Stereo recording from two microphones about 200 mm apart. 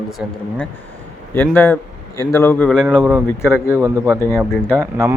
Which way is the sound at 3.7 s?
10° right (ahead or behind).